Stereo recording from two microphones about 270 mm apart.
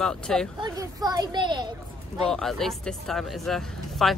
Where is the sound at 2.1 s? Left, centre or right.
Centre.